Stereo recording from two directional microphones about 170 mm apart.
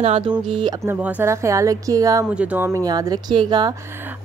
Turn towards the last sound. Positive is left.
turn(degrees=-25)  # may be behind; listen again after turning